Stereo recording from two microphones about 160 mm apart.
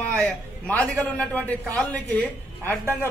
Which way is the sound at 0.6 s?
10° left (ahead or behind).